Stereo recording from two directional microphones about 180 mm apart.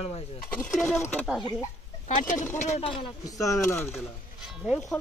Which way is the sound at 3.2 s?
20° left (ahead or behind).